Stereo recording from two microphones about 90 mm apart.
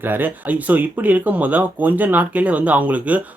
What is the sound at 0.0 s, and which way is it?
Speech, 20° right (ahead or behind).